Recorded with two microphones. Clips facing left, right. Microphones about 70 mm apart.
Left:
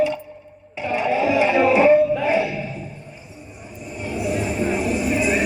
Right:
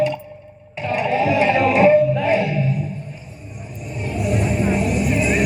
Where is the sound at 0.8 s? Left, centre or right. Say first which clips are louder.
Right 1 dB; centre.